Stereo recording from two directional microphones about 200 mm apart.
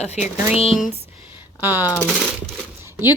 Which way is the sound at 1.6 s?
10° right (ahead or behind).